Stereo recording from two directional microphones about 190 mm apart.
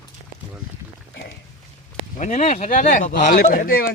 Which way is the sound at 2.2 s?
40° left (ahead or behind).